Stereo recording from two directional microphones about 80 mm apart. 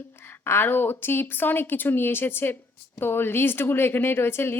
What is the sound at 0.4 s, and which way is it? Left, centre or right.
A woman's voice, left.